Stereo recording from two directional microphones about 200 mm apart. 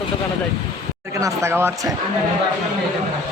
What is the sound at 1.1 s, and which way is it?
Speech, 15° right (ahead or behind).